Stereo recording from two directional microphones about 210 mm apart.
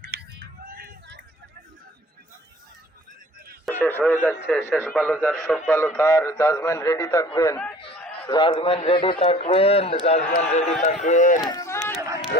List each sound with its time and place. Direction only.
0.0 s a sound: 50° right (ahead or behind)
3.7 s a man's voice: 10° left (ahead or behind); by 11.3 s 35° left (ahead or behind)
11.3 s run: 20° left (ahead or behind)